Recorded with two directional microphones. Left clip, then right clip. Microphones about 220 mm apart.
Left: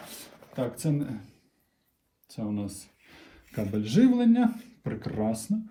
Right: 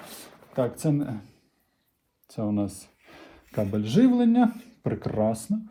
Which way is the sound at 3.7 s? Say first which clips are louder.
Right 1 dB; 15° right (ahead or behind).